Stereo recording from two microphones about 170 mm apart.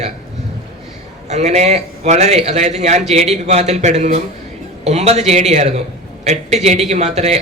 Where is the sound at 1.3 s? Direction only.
40° right (ahead or behind).